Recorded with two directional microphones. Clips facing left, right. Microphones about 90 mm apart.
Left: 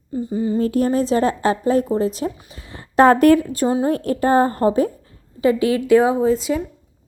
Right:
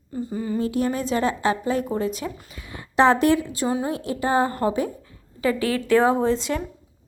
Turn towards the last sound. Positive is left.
turn(degrees=5)  # may be behind; listen again after turning